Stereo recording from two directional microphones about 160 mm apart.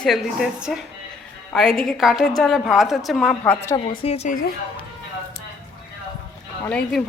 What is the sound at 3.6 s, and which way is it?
Speech, 25° left (ahead or behind).